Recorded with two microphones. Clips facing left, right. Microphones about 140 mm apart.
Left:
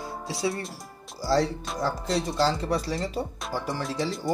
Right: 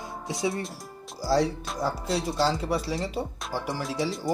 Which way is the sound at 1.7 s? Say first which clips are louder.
Left 1 dB; 5° right (ahead or behind).